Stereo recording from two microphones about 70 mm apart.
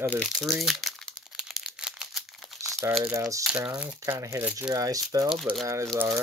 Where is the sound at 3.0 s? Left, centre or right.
Right.